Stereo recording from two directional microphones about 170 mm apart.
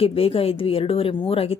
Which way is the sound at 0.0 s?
35° left (ahead or behind).